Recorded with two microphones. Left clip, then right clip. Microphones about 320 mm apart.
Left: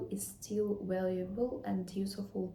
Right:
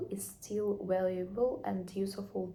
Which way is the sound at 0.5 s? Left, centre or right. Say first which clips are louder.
Right 2 dB; centre.